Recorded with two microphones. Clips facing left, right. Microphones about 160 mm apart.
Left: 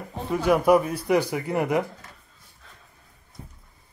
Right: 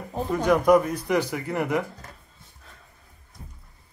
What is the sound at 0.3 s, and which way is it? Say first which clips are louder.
Speech: even; 10° left (ahead or behind).